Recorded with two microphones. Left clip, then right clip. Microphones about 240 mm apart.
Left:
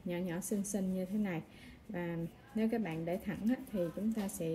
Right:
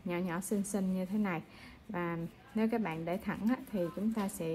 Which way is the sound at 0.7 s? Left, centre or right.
Right.